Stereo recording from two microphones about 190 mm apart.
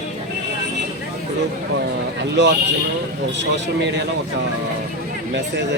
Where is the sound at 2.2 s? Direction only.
65° right (ahead or behind).